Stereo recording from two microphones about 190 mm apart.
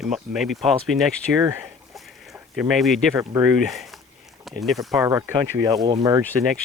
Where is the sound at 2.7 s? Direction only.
Centre (ahead or behind).